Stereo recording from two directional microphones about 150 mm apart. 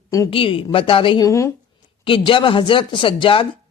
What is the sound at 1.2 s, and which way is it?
Speech, 20° left (ahead or behind).